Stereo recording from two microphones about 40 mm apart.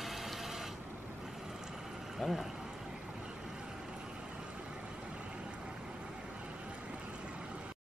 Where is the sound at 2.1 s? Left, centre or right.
Centre.